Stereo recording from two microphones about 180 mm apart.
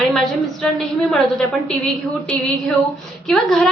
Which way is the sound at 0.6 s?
5° left (ahead or behind).